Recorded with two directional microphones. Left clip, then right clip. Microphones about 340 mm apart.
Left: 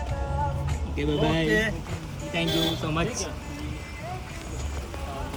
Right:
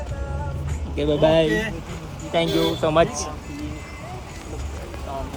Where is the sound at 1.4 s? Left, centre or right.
Centre.